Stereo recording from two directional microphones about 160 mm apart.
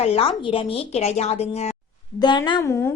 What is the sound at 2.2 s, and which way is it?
Speech, 30° left (ahead or behind).